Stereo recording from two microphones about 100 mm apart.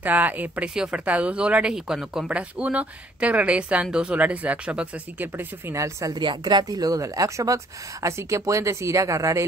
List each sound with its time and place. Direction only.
0.0 s speech: 20° right (ahead or behind)
5.8 s a woman's voice: 35° right (ahead or behind)
6.1 s a woman's voice: 50° right (ahead or behind); by 9.5 s 30° right (ahead or behind)